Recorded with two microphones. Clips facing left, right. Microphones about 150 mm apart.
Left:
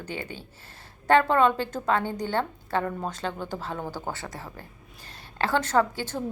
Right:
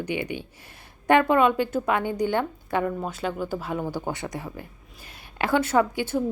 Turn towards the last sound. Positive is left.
turn(degrees=-10)  # may be behind; listen again after turning